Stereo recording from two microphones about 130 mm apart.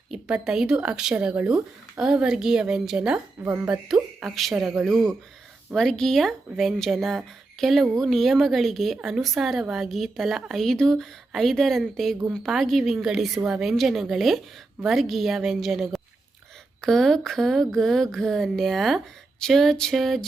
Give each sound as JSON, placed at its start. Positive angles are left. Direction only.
{"t": 0.1, "sound": "speech", "side_deg": -5}
{"t": 3.4, "sound": "a woman's voice", "side_deg": -20}
{"t": 3.7, "sound": "speech", "side_deg": -5}